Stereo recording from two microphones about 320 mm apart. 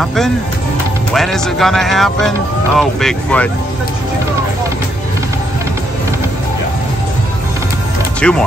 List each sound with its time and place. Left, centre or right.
0.0 s speech: centre
8.2 s speech: centre